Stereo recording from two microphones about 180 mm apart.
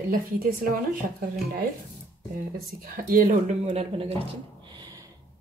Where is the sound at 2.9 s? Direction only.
50° right (ahead or behind).